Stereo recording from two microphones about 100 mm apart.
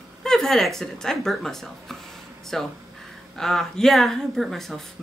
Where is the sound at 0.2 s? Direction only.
5° left (ahead or behind).